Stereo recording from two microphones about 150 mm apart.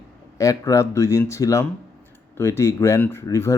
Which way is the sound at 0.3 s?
20° left (ahead or behind).